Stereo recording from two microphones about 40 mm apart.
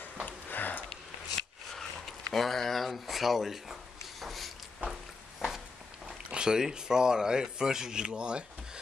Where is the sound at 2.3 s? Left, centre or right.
Centre.